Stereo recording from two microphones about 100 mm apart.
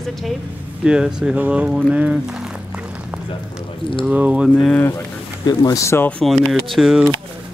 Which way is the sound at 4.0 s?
15° right (ahead or behind).